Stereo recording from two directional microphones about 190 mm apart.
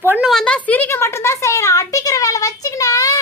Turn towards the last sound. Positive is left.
turn(degrees=20)  # may be behind; listen again after turning